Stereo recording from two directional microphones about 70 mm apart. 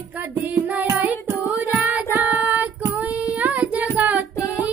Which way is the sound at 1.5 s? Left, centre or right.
Right.